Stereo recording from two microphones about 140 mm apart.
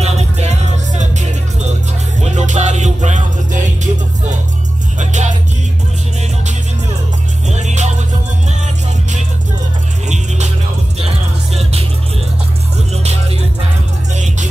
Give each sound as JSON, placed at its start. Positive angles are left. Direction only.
{"t": 0.0, "sound": "music", "side_deg": -50}
{"t": 2.2, "sound": "music", "side_deg": -60}
{"t": 4.9, "sound": "music", "side_deg": -60}
{"t": 7.4, "sound": "music", "side_deg": -55}
{"t": 10.0, "sound": "music", "side_deg": -55}
{"t": 11.0, "sound": "music", "side_deg": -45}
{"t": 14.1, "sound": "music", "side_deg": -60}